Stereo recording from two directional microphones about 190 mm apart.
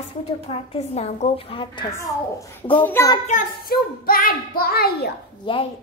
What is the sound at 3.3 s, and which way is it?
Speech, 45° left (ahead or behind).